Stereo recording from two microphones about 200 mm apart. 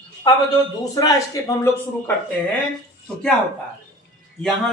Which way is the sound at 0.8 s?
15° left (ahead or behind).